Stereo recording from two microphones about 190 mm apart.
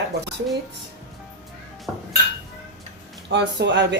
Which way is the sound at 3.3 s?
65° right (ahead or behind).